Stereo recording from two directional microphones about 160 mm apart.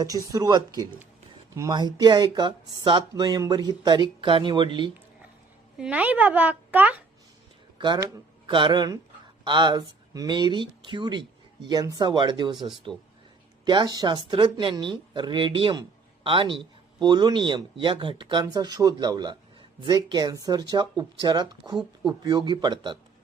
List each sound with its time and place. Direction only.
0.0 s speech: 20° right (ahead or behind)
5.7 s a child's voice: 5° right (ahead or behind)
7.8 s speech: 30° right (ahead or behind)
12.5 s speech: centre (ahead or behind)
13.7 s speech: 25° right (ahead or behind)